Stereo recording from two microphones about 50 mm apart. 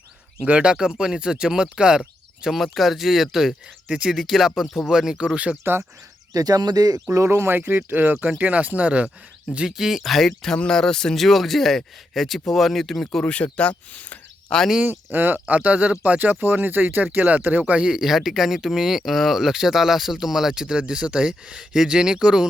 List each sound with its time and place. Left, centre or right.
0.4 s speech: right
2.5 s speech: centre
3.8 s speech: centre
4.1 s speech: centre
5.7 s speech: right
6.9 s speech: right
7.5 s speech: right
9.5 s speech: centre
13.2 s speech: left
14.5 s speech: centre
14.8 s speech: right
15.5 s speech: right
18.0 s speech: centre